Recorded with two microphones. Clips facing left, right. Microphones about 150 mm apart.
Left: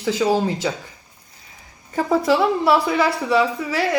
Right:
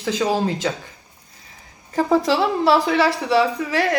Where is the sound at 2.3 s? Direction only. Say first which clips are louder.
Left 1 dB; 15° left (ahead or behind).